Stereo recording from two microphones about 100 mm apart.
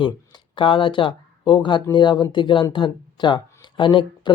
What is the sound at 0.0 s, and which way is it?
Speech, 50° left (ahead or behind).